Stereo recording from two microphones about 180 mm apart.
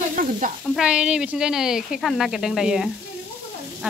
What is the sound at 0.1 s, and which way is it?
Sizzle, 50° right (ahead or behind).